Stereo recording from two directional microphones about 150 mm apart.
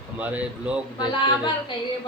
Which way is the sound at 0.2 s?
10° right (ahead or behind).